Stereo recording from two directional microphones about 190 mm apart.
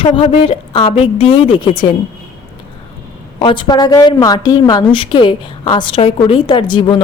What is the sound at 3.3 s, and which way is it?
A woman's voice, 25° left (ahead or behind).